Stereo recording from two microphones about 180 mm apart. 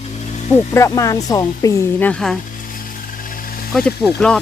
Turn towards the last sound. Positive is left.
turn(degrees=5)  # may be behind; listen again after turning